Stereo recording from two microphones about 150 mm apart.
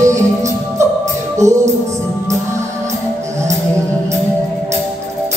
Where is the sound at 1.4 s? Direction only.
20° right (ahead or behind).